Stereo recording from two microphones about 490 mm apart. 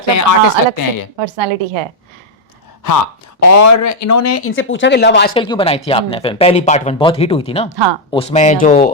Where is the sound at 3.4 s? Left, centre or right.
Left.